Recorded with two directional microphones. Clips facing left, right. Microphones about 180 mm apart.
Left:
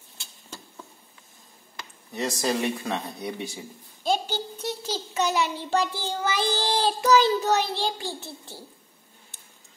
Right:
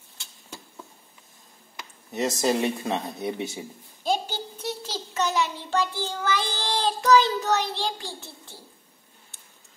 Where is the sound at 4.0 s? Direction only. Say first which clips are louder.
Left 1 dB; 5° right (ahead or behind).